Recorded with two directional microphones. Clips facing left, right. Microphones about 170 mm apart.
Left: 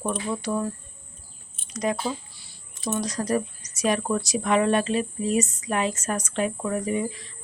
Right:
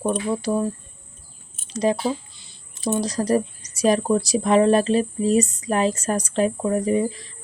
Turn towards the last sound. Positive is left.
turn(degrees=-35)  # may be behind; listen again after turning